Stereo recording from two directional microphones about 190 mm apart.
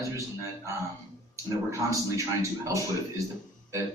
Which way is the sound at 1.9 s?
15° right (ahead or behind).